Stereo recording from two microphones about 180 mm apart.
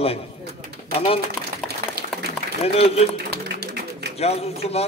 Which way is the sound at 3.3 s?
65° right (ahead or behind).